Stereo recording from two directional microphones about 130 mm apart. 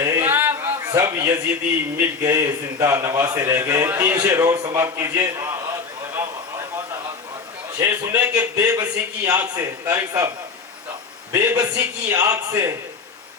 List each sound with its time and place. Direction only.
0.0 s a sound: 20° right (ahead or behind)
0.9 s a man's voice: 20° right (ahead or behind)
7.8 s a man's voice: 25° right (ahead or behind)